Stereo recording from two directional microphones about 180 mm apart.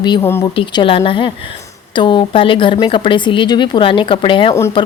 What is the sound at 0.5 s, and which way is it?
Speech, 30° left (ahead or behind).